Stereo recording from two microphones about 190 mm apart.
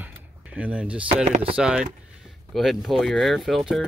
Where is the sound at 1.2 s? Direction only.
35° right (ahead or behind).